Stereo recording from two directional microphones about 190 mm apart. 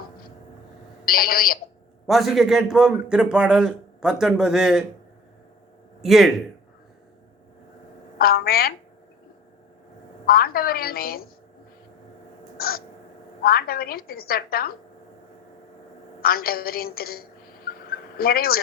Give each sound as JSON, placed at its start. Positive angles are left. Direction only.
{"t": 1.0, "sound": "a woman's voice", "side_deg": 50}
{"t": 2.0, "sound": "a man's voice", "side_deg": 0}
{"t": 6.0, "sound": "speech", "side_deg": 0}
{"t": 8.2, "sound": "a woman's voice", "side_deg": 50}
{"t": 10.2, "sound": "a woman's voice", "side_deg": 50}
{"t": 12.5, "sound": "crow", "side_deg": 50}
{"t": 13.4, "sound": "a woman's voice", "side_deg": 50}
{"t": 16.2, "sound": "a woman's voice", "side_deg": 50}